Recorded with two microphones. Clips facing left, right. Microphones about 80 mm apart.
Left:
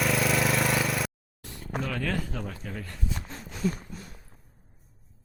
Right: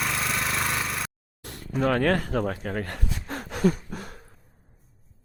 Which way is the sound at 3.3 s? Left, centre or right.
Right.